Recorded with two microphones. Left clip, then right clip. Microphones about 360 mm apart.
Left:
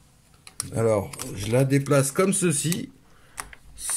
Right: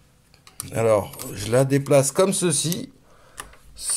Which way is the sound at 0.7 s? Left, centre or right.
Right.